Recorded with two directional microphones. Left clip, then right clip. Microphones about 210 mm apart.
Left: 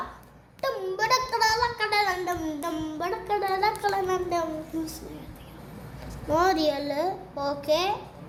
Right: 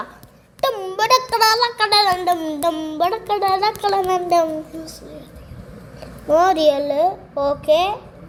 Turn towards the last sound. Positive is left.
turn(degrees=25)  # may be behind; listen again after turning